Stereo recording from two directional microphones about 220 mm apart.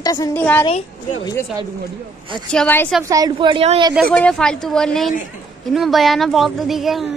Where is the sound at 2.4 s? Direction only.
5° left (ahead or behind).